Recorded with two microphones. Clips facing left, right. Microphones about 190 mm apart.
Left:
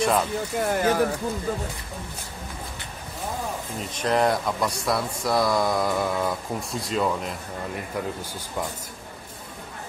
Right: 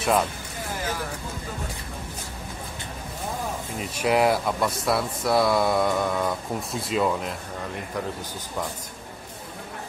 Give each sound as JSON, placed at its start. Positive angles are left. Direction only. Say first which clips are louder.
{"t": 0.0, "sound": "speech", "louder": "even", "side_deg": -5}
{"t": 0.6, "sound": "speech", "louder": "left 9 dB", "side_deg": 60}
{"t": 3.9, "sound": "speech", "louder": "right 1 dB", "side_deg": -10}